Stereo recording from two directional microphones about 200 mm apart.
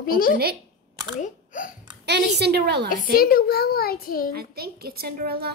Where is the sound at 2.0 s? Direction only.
55° right (ahead or behind).